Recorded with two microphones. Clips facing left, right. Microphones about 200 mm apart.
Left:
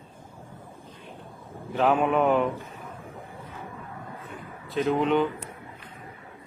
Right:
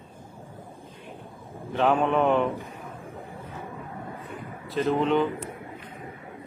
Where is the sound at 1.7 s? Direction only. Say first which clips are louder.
Even; 5° left (ahead or behind).